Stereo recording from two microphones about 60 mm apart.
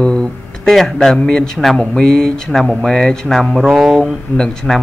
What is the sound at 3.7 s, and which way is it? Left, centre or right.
Speech, centre.